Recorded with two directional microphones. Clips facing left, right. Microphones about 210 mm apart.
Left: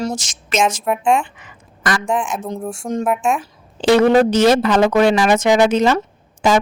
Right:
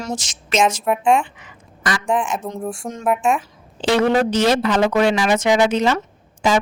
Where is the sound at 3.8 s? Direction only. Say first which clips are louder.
Left 5 dB; 45° left (ahead or behind).